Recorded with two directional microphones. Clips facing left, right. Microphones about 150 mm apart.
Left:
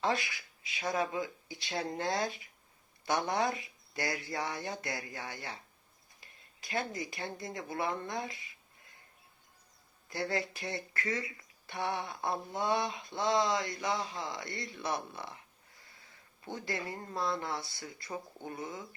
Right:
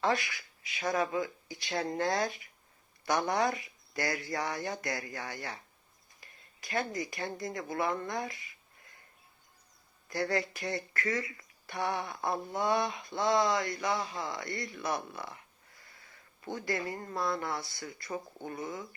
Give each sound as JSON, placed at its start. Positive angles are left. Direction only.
{"t": 0.0, "sound": "speech", "side_deg": 20}
{"t": 10.2, "sound": "speech", "side_deg": 20}
{"t": 17.1, "sound": "speech", "side_deg": 20}